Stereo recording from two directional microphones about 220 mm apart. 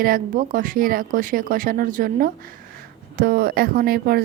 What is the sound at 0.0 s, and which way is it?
Speech, 40° right (ahead or behind).